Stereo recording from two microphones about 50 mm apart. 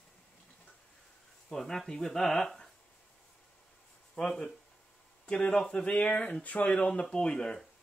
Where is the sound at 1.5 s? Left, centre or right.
Centre.